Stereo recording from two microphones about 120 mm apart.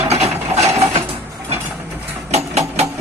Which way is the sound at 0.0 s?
65° right (ahead or behind).